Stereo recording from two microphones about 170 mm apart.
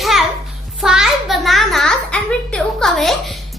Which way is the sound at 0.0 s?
Centre (ahead or behind).